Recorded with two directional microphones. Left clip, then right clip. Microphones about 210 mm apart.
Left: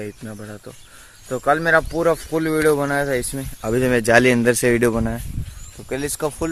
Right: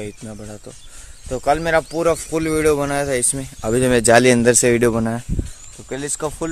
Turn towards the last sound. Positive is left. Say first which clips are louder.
# left 1 dB
turn(degrees=0)  # may be behind; listen again after turning